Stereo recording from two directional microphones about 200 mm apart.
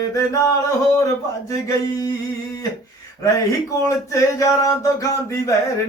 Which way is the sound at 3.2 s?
15° left (ahead or behind).